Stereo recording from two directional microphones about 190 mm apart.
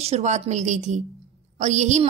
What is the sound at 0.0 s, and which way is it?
Speech, 35° right (ahead or behind).